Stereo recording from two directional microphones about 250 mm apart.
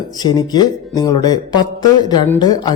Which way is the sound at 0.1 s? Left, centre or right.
Centre.